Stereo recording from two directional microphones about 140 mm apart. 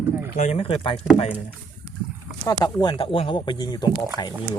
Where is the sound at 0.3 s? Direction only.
55° left (ahead or behind).